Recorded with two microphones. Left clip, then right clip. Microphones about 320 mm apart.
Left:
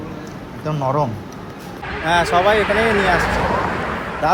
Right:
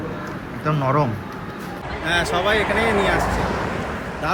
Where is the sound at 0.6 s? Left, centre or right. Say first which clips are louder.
Left 1 dB; centre.